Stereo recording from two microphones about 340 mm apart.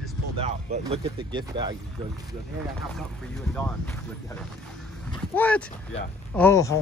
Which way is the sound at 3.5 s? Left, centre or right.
Centre.